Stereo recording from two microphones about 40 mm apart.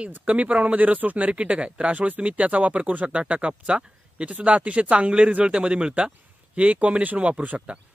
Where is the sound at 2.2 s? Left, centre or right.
Right.